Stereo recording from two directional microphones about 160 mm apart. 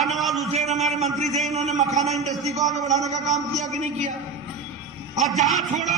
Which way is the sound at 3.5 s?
45° right (ahead or behind).